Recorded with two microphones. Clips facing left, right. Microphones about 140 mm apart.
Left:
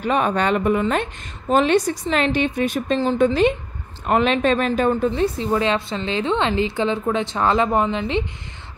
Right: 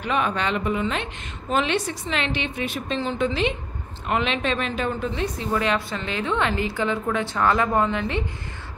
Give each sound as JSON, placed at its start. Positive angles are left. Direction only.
{"t": 0.0, "sound": "a woman's voice", "side_deg": 40}